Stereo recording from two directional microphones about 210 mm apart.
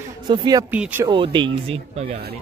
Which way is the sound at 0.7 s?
10° right (ahead or behind).